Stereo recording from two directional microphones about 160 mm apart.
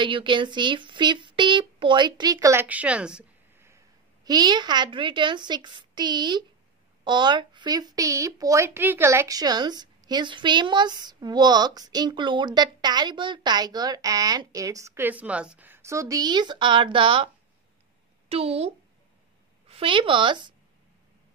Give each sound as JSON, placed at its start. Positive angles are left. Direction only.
{"t": 0.0, "sound": "speech", "side_deg": -30}
{"t": 18.3, "sound": "speech", "side_deg": -40}
{"t": 19.7, "sound": "speech", "side_deg": -35}